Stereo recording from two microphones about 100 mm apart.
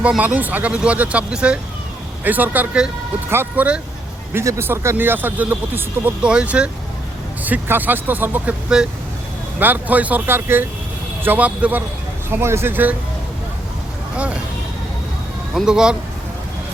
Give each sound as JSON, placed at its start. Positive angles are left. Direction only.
{"t": 0.0, "sound": "speech", "side_deg": -10}
{"t": 9.6, "sound": "speech", "side_deg": -20}
{"t": 12.3, "sound": "speech", "side_deg": -25}
{"t": 15.5, "sound": "speech", "side_deg": -5}